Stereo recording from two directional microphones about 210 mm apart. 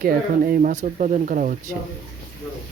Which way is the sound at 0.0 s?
45° right (ahead or behind).